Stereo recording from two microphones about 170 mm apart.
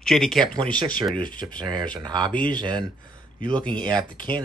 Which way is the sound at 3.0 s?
55° left (ahead or behind).